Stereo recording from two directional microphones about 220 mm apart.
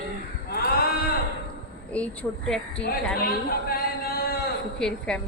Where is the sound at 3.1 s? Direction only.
45° left (ahead or behind).